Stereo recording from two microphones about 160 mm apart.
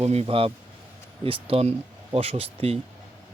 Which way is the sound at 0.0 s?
40° right (ahead or behind).